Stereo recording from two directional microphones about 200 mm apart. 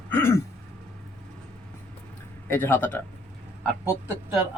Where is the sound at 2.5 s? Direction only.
10° left (ahead or behind).